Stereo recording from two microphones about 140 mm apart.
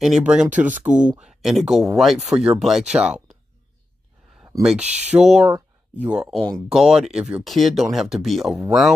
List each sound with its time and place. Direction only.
0.0 s speech: 5° right (ahead or behind)
4.6 s speech: 10° right (ahead or behind)